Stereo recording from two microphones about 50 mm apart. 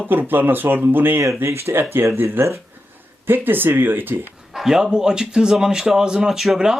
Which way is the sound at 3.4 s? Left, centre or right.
Right.